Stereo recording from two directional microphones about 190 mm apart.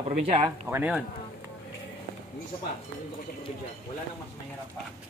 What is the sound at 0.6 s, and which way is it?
Speech, 5° right (ahead or behind).